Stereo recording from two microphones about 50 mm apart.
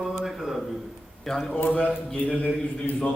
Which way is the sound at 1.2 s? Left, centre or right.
Centre.